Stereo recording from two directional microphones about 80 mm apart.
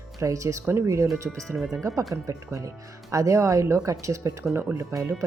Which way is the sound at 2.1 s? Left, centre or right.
Right.